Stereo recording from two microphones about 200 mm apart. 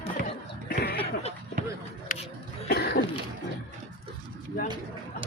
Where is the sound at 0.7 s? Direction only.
50° left (ahead or behind).